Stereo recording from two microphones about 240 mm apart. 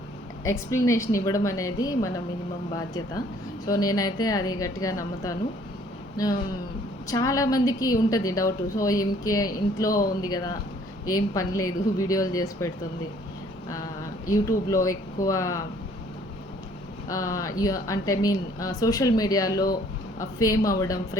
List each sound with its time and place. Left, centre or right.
0.4 s speech: centre
3.7 s speech: centre
7.1 s speech: centre
17.1 s speech: centre